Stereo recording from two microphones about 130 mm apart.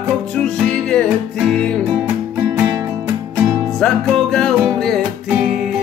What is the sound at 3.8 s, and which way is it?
Music, 5° left (ahead or behind).